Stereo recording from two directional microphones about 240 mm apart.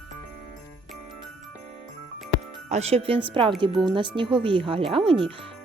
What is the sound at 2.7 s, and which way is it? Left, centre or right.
Speech, right.